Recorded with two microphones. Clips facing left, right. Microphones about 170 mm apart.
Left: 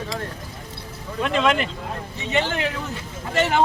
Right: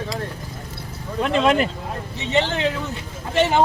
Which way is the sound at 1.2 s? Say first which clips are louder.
Right 3 dB; 35° right (ahead or behind).